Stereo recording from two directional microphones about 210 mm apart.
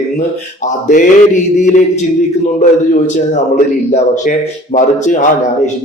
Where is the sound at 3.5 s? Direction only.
35° left (ahead or behind).